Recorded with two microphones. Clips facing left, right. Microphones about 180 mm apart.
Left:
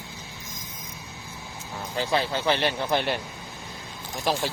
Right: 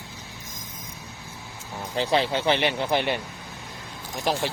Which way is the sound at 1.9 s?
20° right (ahead or behind).